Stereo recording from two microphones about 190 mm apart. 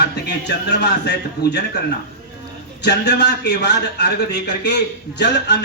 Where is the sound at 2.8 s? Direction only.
60° left (ahead or behind).